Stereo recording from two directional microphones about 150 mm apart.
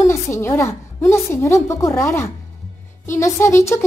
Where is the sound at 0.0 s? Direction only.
20° left (ahead or behind).